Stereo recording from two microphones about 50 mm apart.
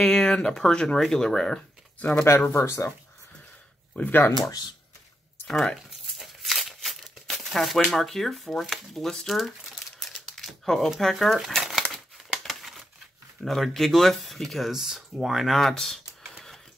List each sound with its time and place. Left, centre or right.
0.0 s speech: centre
2.5 s speech: left
4.0 s speech: left
5.5 s speech: centre
6.2 s speech: centre
9.9 s crumpling: centre
11.0 s speech: centre
11.3 s crumpling: centre
13.4 s speech: centre